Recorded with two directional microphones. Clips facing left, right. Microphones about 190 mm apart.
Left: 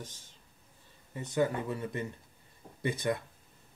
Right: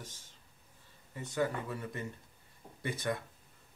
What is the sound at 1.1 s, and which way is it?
Speech, 20° left (ahead or behind).